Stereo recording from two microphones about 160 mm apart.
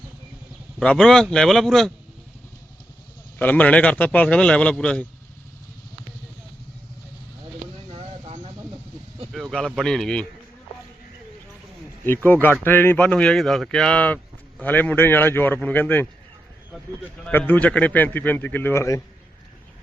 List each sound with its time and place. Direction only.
0.8 s speech: 5° left (ahead or behind)
3.3 s speech: 10° left (ahead or behind)
7.9 s a sound: 35° right (ahead or behind)
9.3 s speech: 5° left (ahead or behind)
12.0 s speech: 15° left (ahead or behind)
17.2 s speech: 10° left (ahead or behind)